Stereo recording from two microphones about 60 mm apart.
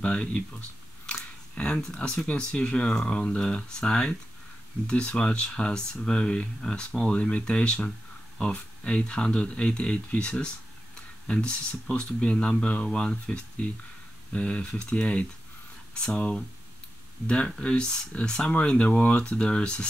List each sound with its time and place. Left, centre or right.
0.0 s speech: centre